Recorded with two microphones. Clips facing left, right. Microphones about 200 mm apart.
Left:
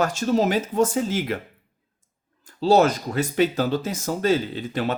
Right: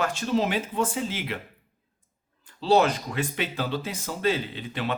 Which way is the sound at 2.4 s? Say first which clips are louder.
Left 4 dB; 45° left (ahead or behind).